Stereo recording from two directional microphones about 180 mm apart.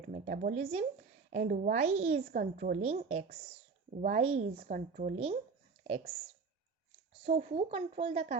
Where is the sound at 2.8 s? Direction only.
35° right (ahead or behind).